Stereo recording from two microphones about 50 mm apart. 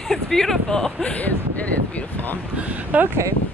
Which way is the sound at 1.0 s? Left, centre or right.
Left.